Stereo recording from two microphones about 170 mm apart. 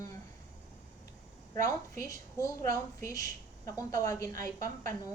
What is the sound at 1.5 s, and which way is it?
A woman's voice, 20° left (ahead or behind).